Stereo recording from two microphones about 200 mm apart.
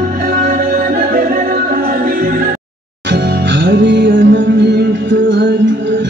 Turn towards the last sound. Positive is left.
turn(degrees=-65)  # may be behind; listen again after turning